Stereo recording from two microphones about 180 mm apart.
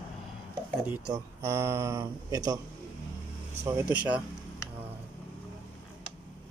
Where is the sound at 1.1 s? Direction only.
15° right (ahead or behind).